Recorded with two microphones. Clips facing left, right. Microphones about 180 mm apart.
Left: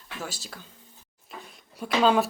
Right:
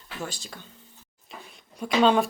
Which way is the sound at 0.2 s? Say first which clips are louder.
Right 2 dB; 5° left (ahead or behind).